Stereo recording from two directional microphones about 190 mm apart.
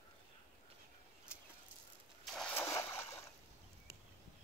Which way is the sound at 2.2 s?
5° left (ahead or behind).